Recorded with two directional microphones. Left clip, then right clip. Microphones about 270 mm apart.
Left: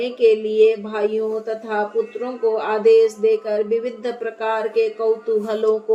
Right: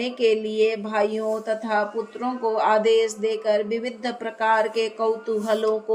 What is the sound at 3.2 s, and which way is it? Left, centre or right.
Speech, right.